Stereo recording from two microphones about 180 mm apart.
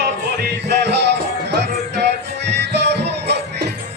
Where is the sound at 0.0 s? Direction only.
70° right (ahead or behind).